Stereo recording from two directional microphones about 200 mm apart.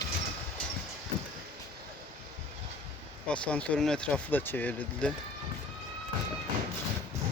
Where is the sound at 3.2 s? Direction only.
5° left (ahead or behind).